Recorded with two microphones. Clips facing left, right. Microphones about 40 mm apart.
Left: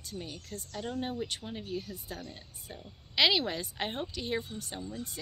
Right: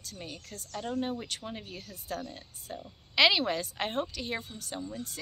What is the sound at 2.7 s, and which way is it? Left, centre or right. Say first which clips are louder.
A woman's voice: right 3 dB; centre.